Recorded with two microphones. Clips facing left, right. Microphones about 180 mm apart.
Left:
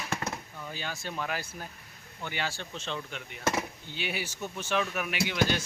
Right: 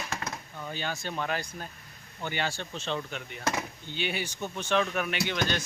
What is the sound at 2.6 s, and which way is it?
Speech, 25° right (ahead or behind).